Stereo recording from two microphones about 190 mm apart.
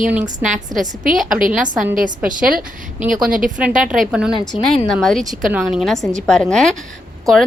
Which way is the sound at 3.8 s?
5° right (ahead or behind).